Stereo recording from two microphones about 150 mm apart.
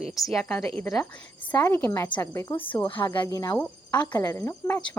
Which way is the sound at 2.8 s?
35° left (ahead or behind).